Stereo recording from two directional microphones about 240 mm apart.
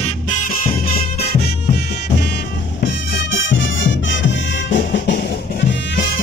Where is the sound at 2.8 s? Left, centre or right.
Left.